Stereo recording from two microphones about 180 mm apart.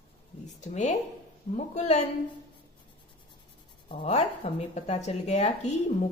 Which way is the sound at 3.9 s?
35° left (ahead or behind).